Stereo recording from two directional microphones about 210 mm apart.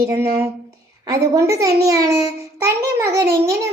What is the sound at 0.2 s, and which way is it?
A child's voice, 10° right (ahead or behind).